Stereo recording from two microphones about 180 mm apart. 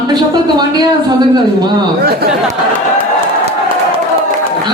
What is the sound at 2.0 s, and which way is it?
Speech, 60° right (ahead or behind).